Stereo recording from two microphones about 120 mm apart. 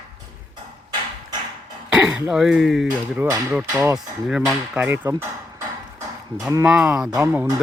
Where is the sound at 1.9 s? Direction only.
5° right (ahead or behind).